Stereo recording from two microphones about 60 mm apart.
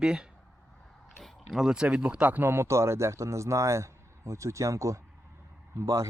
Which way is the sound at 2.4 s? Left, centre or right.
Right.